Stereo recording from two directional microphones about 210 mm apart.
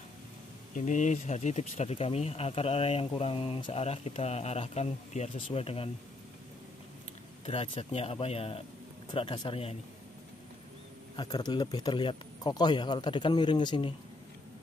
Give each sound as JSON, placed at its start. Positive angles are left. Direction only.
{"t": 0.7, "sound": "speech", "side_deg": 35}
{"t": 7.4, "sound": "speech", "side_deg": 30}
{"t": 11.1, "sound": "speech", "side_deg": 20}